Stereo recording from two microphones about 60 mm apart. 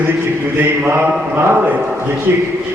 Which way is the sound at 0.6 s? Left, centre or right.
Right.